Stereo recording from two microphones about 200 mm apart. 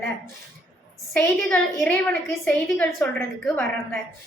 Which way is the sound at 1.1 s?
5° left (ahead or behind).